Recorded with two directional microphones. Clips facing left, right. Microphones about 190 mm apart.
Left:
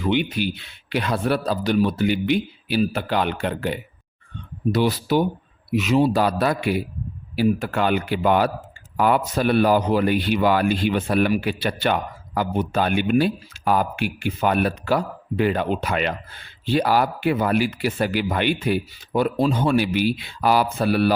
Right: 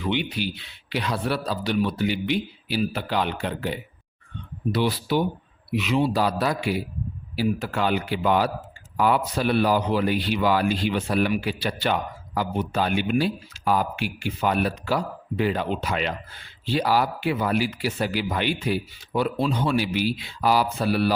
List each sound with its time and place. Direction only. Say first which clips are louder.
0.0 s speech: left 4 dB; 50° left (ahead or behind)
4.7 s speech: left 3 dB; 45° left (ahead or behind)